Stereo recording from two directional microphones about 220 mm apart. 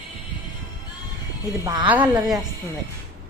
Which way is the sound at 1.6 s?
20° right (ahead or behind).